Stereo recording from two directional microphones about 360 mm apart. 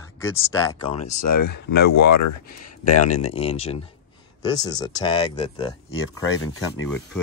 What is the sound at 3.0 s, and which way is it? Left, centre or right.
Speech, centre.